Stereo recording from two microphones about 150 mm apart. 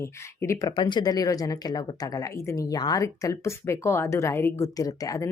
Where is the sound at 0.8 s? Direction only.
30° left (ahead or behind).